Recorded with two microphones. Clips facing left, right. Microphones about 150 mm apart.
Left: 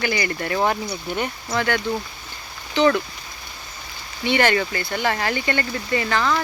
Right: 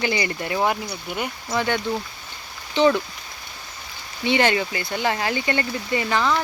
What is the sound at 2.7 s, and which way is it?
Speech, 20° right (ahead or behind).